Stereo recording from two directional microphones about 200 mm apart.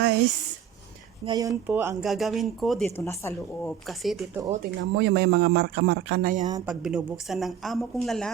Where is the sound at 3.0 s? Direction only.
15° left (ahead or behind).